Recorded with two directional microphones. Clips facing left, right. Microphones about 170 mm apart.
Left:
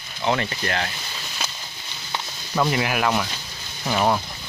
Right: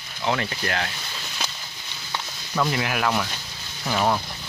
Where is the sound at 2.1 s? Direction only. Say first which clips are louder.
Left 2 dB; 15° left (ahead or behind).